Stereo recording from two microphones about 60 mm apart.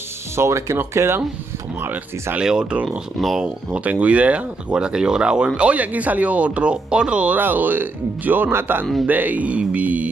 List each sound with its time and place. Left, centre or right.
0.4 s speech: right
2.3 s speech: centre
3.2 s speech: centre
3.7 s speech: right
7.3 s speech: right
9.0 s speech: right